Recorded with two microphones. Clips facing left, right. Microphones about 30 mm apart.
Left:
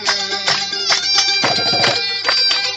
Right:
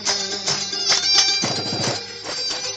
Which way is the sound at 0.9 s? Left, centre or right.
Centre.